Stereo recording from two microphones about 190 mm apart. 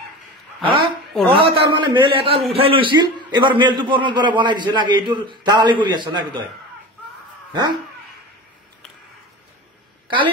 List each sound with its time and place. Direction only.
0.6 s a sound: 25° right (ahead or behind)
1.3 s a man's voice: 25° right (ahead or behind)
10.0 s a woman's voice: 25° right (ahead or behind)